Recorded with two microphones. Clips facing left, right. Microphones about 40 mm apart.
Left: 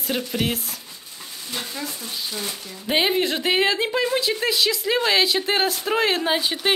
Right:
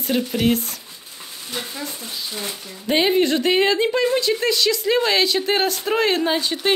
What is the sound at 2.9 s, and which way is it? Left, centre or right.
Speech, centre.